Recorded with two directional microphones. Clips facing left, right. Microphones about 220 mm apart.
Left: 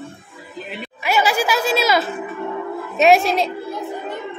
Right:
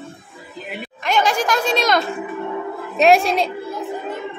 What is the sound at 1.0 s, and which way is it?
A woman's voice, 5° left (ahead or behind).